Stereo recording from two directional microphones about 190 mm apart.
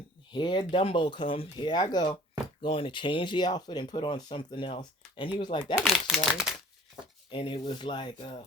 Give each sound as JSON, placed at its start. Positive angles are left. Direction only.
{"t": 0.3, "sound": "speech", "side_deg": 25}
{"t": 5.8, "sound": "speech", "side_deg": 0}
{"t": 7.3, "sound": "speech", "side_deg": 25}